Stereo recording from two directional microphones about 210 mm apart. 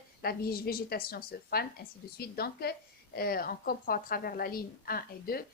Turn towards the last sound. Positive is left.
turn(degrees=45)  # may be behind; listen again after turning